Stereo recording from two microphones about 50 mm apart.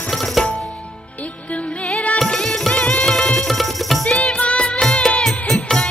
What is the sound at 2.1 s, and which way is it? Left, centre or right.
Music, centre.